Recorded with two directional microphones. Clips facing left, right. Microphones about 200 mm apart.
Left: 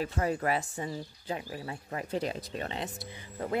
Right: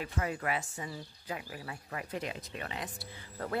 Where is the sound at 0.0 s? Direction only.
35° left (ahead or behind).